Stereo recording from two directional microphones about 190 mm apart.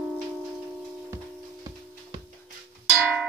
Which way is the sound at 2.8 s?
Centre (ahead or behind).